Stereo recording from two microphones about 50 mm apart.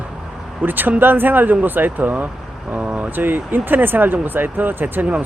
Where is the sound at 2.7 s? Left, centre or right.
Right.